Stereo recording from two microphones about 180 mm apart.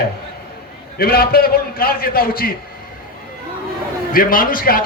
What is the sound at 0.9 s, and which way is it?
A man's voice, 60° left (ahead or behind).